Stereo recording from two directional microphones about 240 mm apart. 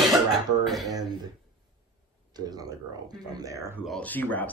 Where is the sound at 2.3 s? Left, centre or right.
Centre.